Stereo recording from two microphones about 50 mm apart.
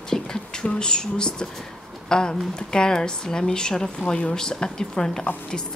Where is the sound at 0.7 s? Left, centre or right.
Centre.